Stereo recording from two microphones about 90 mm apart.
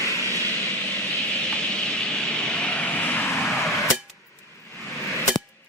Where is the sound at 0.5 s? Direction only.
15° left (ahead or behind).